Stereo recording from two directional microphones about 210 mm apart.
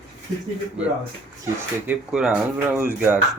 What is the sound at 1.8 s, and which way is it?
Speech, 5° right (ahead or behind).